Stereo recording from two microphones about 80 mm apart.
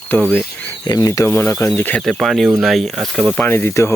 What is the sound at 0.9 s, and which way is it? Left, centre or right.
Speech, left.